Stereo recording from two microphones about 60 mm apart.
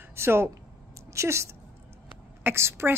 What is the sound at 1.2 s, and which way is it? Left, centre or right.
Speech, right.